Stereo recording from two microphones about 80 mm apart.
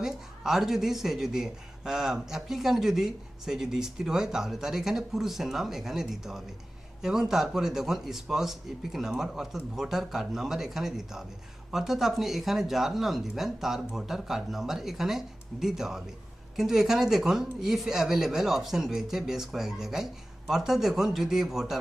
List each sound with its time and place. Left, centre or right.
0.0 s speech: centre